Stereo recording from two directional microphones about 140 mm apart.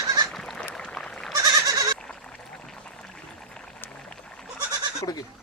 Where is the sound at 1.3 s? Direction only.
25° right (ahead or behind).